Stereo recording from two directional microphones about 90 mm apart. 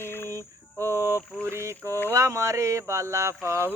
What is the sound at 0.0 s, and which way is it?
Cricket, 25° left (ahead or behind).